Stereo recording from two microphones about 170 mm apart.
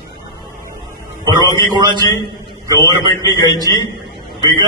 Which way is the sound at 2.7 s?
20° left (ahead or behind).